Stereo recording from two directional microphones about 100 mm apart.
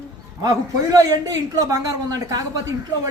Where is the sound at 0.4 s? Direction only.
35° right (ahead or behind).